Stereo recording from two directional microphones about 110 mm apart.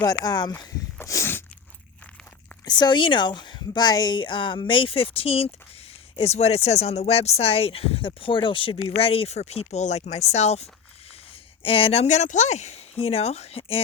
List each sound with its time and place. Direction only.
0.0 s speech: 35° left (ahead or behind)
0.9 s a sound: 25° left (ahead or behind)
2.6 s speech: 40° left (ahead or behind); by 10.7 s 75° left (ahead or behind)
11.6 s speech: 55° left (ahead or behind)